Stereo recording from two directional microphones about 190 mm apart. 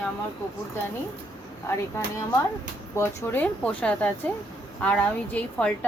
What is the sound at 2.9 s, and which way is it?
A woman's voice, 10° left (ahead or behind).